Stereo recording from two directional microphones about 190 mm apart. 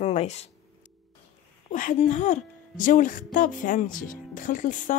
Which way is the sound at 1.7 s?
40° left (ahead or behind).